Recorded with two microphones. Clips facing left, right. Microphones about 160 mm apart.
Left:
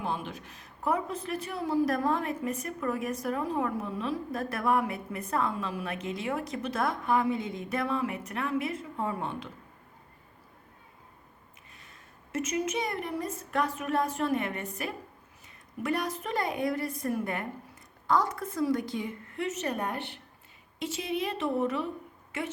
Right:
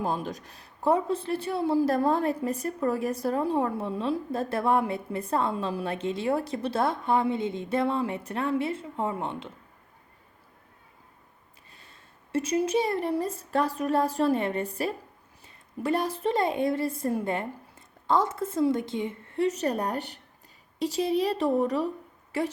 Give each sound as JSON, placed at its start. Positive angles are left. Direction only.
{"t": 0.0, "sound": "speech", "side_deg": -40}
{"t": 12.3, "sound": "a woman's voice", "side_deg": -30}